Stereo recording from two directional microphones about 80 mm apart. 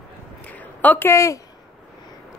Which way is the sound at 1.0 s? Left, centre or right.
Left.